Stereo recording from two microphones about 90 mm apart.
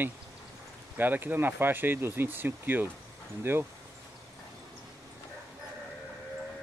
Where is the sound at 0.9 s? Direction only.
20° right (ahead or behind).